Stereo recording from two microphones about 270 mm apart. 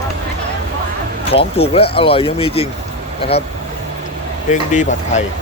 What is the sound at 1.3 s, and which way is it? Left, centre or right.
Speech, left.